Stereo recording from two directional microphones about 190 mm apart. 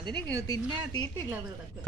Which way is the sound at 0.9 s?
20° left (ahead or behind).